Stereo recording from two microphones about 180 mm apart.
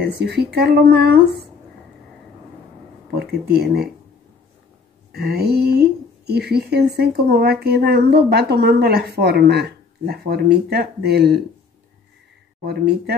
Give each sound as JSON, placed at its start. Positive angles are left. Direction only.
{"t": 0.0, "sound": "a woman's voice", "side_deg": -65}
{"t": 3.2, "sound": "a woman's voice", "side_deg": -60}
{"t": 5.1, "sound": "a woman's voice", "side_deg": -60}
{"t": 12.6, "sound": "a woman's voice", "side_deg": -65}